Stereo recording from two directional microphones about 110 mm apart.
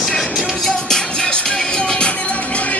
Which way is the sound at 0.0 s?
5° left (ahead or behind).